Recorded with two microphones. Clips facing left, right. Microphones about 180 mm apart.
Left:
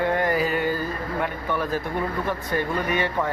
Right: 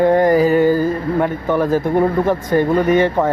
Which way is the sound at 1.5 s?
45° right (ahead or behind).